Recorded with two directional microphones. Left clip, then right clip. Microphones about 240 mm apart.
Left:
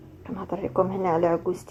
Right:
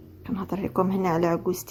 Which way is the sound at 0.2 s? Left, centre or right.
Right.